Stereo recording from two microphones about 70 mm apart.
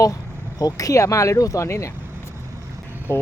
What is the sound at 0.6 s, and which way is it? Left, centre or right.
Speech, left.